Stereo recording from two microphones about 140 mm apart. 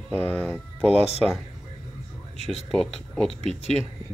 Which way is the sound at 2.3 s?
50° left (ahead or behind).